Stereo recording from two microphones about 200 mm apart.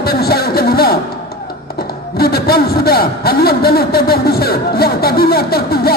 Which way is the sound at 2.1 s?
50° left (ahead or behind).